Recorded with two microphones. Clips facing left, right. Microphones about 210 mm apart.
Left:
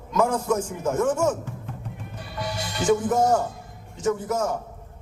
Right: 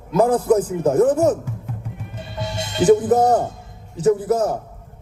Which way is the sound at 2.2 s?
25° right (ahead or behind).